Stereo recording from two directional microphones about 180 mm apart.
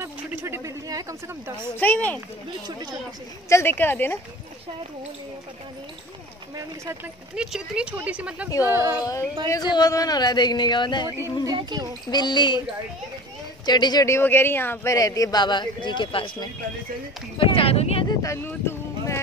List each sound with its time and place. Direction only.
0.0 s a sound: 10° right (ahead or behind)
1.8 s speech: 10° left (ahead or behind)
3.4 s speech: 15° left (ahead or behind)
7.3 s speech: 5° right (ahead or behind)
9.0 s speech: 20° left (ahead or behind)
11.4 s speech: 20° right (ahead or behind)
12.1 s speech: 25° left (ahead or behind)
13.7 s speech: 25° left (ahead or behind)
18.2 s a sound: 15° left (ahead or behind)